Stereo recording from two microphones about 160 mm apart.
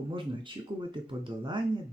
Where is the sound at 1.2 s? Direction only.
30° right (ahead or behind).